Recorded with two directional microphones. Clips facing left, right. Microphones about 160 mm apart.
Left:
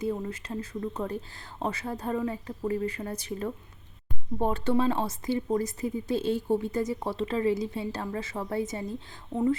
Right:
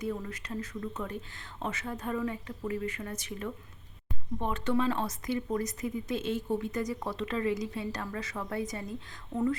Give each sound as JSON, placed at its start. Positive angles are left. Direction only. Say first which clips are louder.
{"t": 0.0, "sound": "speech", "louder": "left 4 dB", "side_deg": 25}